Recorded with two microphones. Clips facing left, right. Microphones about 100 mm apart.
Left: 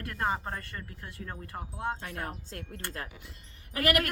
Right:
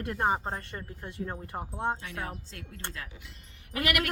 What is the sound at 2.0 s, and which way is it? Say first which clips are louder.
Speech: even; 50° left (ahead or behind).